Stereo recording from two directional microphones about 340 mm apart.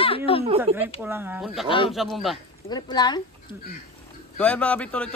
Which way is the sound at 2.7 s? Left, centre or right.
Centre.